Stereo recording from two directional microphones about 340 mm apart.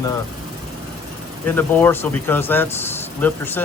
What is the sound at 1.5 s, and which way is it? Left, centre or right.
Speech, centre.